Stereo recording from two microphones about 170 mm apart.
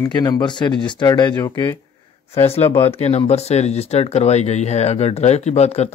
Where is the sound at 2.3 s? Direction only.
35° left (ahead or behind).